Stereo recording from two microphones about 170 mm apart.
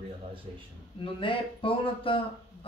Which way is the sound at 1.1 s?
30° left (ahead or behind).